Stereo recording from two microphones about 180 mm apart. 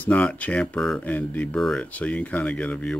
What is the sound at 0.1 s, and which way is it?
Speech, 10° left (ahead or behind).